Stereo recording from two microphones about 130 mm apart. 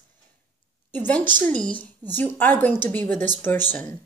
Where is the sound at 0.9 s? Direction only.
15° left (ahead or behind).